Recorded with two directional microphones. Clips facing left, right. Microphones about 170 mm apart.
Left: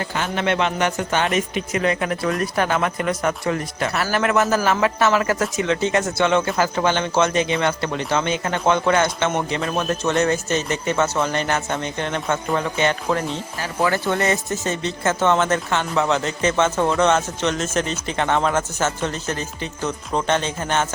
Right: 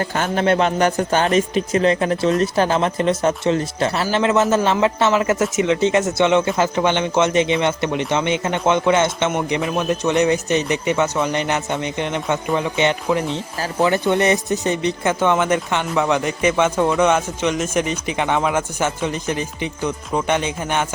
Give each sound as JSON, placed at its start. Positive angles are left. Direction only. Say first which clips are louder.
{"t": 0.0, "sound": "a man's voice", "louder": "right 4 dB", "side_deg": -40}